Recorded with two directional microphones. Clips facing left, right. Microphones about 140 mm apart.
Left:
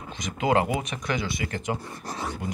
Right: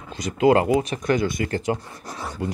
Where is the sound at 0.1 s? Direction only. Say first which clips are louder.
Right 6 dB; 35° right (ahead or behind).